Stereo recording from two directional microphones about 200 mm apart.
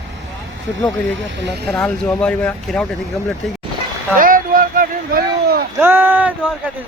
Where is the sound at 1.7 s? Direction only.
5° left (ahead or behind).